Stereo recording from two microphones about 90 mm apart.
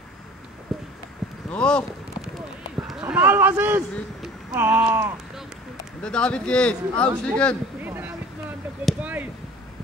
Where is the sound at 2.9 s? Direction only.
10° right (ahead or behind).